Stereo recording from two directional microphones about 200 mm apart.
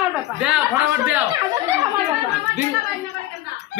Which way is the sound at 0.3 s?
5° right (ahead or behind).